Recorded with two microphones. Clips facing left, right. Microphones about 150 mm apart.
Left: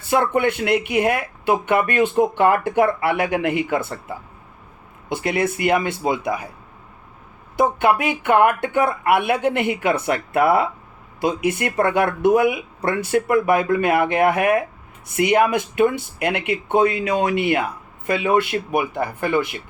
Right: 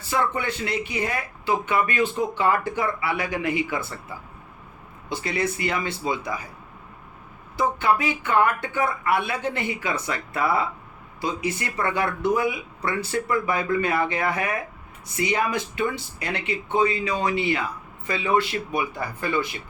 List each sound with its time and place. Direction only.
0.1 s speech: 60° left (ahead or behind)
5.0 s speech: 60° left (ahead or behind)
7.5 s speech: 60° left (ahead or behind)